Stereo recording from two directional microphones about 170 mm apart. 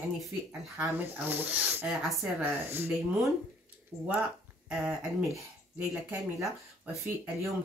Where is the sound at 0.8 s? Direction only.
10° right (ahead or behind).